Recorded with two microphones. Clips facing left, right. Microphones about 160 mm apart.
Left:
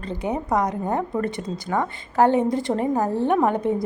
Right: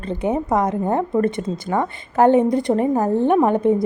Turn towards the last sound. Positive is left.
turn(degrees=-20)  # may be behind; listen again after turning